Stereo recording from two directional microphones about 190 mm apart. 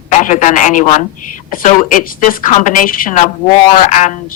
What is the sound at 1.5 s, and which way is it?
A woman's voice, 45° left (ahead or behind).